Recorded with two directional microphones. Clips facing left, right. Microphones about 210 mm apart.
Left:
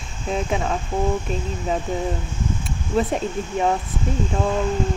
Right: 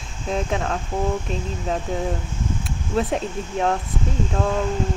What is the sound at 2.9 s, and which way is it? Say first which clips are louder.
Speech: left 1 dB; centre (ahead or behind).